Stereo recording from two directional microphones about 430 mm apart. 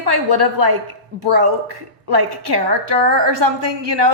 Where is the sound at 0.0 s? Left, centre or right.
Right.